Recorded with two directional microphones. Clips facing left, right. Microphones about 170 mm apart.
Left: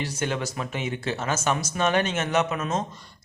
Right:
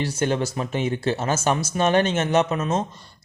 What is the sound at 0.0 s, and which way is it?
A man's voice, 30° right (ahead or behind).